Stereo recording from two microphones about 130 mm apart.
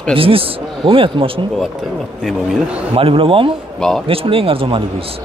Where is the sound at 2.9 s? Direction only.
45° right (ahead or behind).